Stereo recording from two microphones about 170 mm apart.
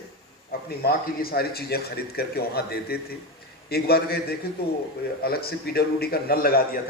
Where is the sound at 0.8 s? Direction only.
65° left (ahead or behind).